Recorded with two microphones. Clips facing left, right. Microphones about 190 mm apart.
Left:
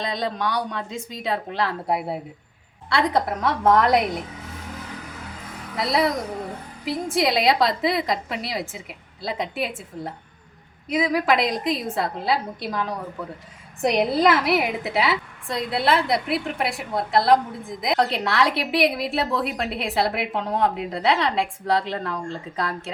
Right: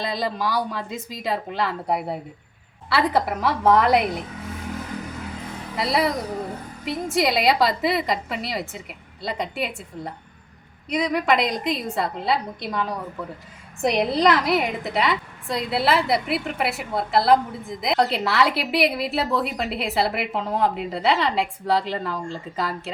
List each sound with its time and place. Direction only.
0.0 s a woman's voice: 5° right (ahead or behind)
5.7 s a woman's voice: centre (ahead or behind)